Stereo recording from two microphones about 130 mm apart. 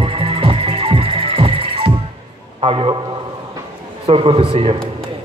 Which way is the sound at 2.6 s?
40° right (ahead or behind).